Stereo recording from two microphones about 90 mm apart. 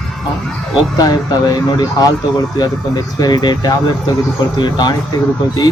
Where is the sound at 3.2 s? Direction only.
50° left (ahead or behind).